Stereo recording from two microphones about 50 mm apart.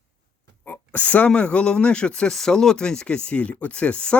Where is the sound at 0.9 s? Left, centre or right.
Left.